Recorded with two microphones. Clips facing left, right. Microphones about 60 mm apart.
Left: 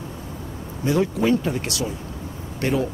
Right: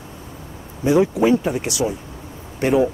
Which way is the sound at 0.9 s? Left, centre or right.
Centre.